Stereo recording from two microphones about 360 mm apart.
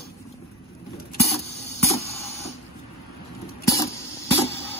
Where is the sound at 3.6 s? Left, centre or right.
Centre.